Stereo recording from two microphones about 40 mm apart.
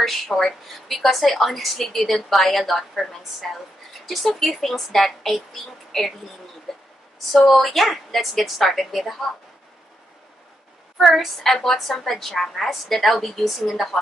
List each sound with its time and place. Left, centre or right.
0.0 s a woman's voice: centre
6.7 s a sound: centre
7.5 s a woman's voice: centre
11.0 s a woman's voice: centre